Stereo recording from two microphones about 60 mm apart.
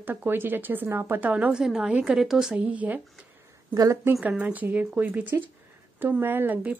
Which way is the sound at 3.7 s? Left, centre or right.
Right.